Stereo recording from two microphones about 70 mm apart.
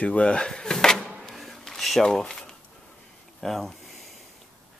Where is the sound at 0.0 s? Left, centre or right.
Centre.